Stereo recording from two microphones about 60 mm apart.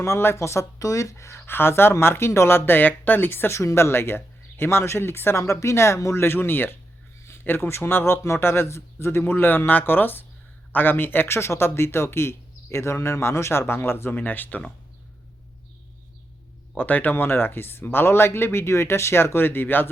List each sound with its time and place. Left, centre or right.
0.0 s speech: left
6.2 s speech: left
16.7 s speech: left